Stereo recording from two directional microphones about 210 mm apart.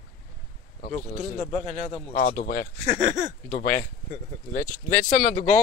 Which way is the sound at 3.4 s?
40° left (ahead or behind).